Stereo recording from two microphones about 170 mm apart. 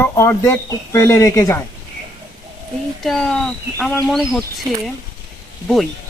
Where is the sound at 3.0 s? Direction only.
Centre (ahead or behind).